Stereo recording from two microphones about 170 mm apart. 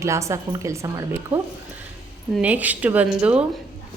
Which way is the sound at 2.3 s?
10° right (ahead or behind).